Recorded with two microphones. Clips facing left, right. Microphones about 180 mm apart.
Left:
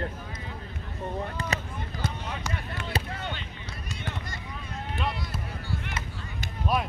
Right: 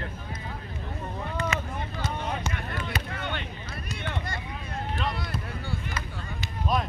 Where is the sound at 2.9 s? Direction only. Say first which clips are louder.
Left 6 dB; 30° left (ahead or behind).